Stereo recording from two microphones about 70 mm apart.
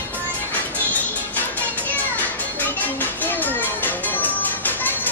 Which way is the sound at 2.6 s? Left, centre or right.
Left.